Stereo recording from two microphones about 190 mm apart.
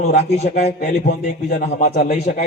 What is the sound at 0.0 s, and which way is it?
Speech, 35° left (ahead or behind).